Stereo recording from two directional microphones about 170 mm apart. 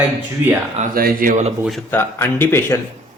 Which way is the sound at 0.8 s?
55° right (ahead or behind).